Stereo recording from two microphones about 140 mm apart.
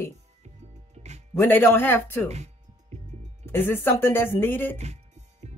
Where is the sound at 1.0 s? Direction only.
50° right (ahead or behind).